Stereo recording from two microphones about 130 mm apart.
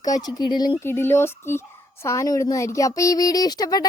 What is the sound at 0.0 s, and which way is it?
Speech, 30° left (ahead or behind).